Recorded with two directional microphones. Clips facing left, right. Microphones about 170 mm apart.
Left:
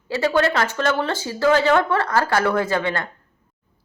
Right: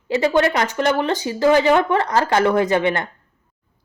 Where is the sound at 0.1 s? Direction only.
20° right (ahead or behind).